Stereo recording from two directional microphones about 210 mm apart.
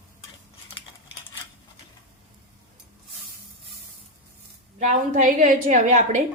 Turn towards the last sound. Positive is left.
turn(degrees=-35)  # may be behind; listen again after turning